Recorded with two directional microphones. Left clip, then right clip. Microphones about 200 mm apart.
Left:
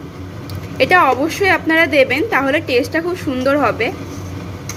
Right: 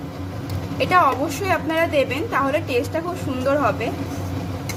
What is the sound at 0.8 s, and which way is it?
A woman's voice, 20° left (ahead or behind).